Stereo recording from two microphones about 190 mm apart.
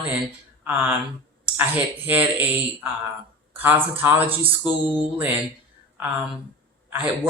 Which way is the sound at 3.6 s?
10° right (ahead or behind).